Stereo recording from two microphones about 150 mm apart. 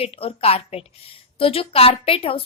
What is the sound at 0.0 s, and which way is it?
A woman's voice, 40° left (ahead or behind).